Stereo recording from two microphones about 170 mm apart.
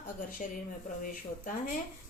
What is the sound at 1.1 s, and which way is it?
Speech, 55° left (ahead or behind).